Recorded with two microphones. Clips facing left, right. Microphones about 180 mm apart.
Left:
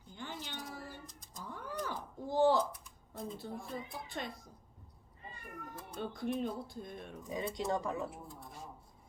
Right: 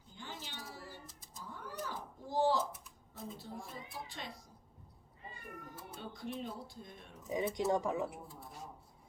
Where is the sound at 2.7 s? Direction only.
5° right (ahead or behind).